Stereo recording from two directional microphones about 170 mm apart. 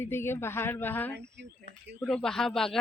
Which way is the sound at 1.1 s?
90° right.